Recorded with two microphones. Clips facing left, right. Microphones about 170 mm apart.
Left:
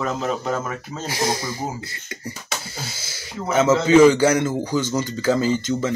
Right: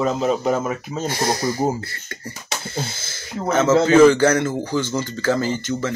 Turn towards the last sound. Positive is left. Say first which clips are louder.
# left 2 dB
turn(degrees=15)  # may be behind; listen again after turning